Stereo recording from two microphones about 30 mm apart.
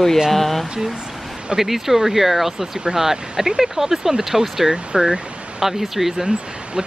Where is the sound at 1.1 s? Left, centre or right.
Centre.